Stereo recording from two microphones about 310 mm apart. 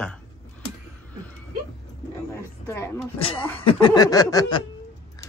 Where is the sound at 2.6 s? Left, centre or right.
Centre.